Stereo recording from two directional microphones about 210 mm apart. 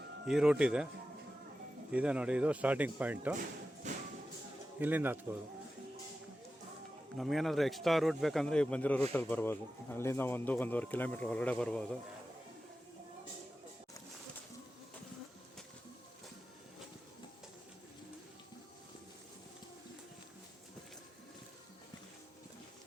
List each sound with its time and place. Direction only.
0.3 s speech: 5° right (ahead or behind)
1.9 s speech: 5° right (ahead or behind)
3.9 s tambourine: 35° right (ahead or behind)
4.8 s speech: 10° right (ahead or behind)
7.2 s a man's voice: centre (ahead or behind)